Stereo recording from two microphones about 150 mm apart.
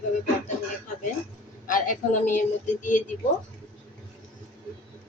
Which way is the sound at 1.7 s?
65° left (ahead or behind).